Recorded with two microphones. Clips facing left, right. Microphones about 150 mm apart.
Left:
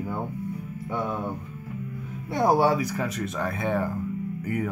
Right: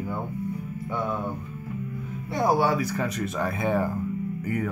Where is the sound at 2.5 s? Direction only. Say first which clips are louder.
Left 2 dB; 30° left (ahead or behind).